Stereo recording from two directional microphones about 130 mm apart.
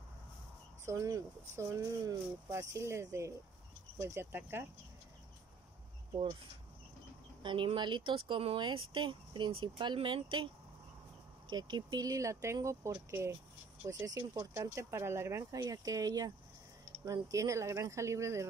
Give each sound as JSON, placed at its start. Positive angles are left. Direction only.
{"t": 0.8, "sound": "speech", "side_deg": -25}
{"t": 7.4, "sound": "speech", "side_deg": -40}